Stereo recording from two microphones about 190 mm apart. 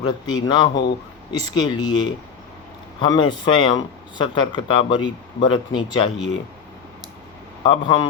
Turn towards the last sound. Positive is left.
turn(degrees=25)  # may be behind; listen again after turning